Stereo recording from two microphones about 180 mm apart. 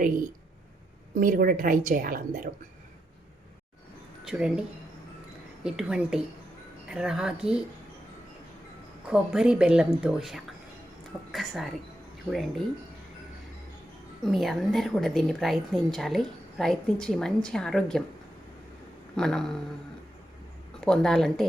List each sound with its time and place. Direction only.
1.1 s a woman's voice: 50° right (ahead or behind)
4.2 s speech: 5° right (ahead or behind)
5.6 s a woman's voice: 5° right (ahead or behind)
9.0 s a woman's voice: 5° right (ahead or behind)
14.3 s a woman's voice: centre (ahead or behind)
19.1 s a woman's voice: 5° left (ahead or behind)
20.8 s a woman's voice: 5° left (ahead or behind)